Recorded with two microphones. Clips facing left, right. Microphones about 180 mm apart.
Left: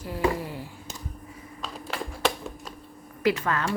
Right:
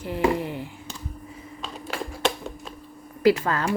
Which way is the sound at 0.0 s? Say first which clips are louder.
Right 3 dB; 25° right (ahead or behind).